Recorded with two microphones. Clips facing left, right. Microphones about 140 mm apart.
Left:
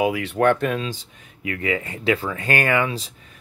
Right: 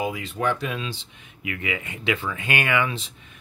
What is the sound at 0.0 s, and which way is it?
Speech, 70° left (ahead or behind).